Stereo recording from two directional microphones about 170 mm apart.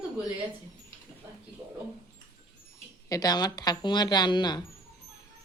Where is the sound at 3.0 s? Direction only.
20° left (ahead or behind).